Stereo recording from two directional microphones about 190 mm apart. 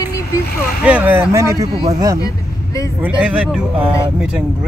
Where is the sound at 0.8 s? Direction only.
10° right (ahead or behind).